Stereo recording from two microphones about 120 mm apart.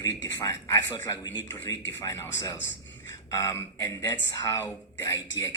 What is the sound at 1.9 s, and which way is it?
Speech, 20° left (ahead or behind).